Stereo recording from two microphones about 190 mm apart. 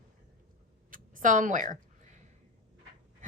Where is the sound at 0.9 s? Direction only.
45° right (ahead or behind).